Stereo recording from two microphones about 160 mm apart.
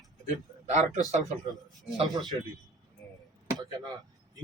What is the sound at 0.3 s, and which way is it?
Speech, 50° right (ahead or behind).